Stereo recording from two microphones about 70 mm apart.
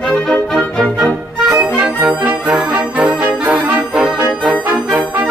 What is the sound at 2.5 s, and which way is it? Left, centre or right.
Brass instrument, centre.